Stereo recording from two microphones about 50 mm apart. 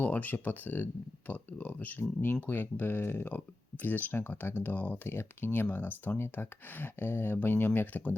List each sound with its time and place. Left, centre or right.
0.0 s speech: left
2.0 s speech: left
5.0 s speech: left
5.6 s speech: left